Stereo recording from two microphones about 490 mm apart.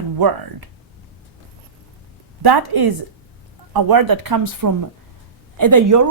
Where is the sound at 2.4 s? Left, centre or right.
Right.